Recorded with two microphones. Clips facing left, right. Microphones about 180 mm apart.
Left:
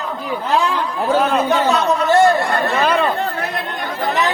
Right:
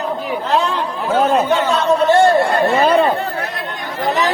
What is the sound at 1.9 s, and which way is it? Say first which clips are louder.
A man's voice: right 3 dB; 30° right (ahead or behind).